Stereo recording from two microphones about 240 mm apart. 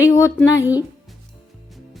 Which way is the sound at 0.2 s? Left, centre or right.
Centre.